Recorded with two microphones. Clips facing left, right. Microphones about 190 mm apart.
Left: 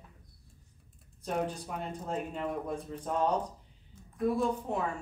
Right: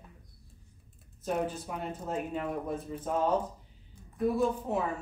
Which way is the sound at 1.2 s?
5° right (ahead or behind).